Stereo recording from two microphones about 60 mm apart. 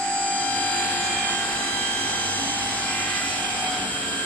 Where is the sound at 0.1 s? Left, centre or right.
Left.